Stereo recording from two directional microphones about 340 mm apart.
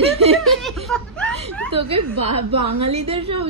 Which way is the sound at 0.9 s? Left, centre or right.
Centre.